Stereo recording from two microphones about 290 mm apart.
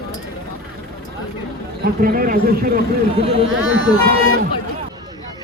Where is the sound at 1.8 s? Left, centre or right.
Right.